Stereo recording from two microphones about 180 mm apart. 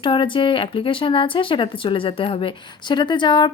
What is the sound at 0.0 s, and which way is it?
Speech, 25° left (ahead or behind).